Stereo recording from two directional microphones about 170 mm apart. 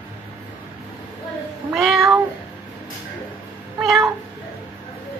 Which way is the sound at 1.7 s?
Centre (ahead or behind).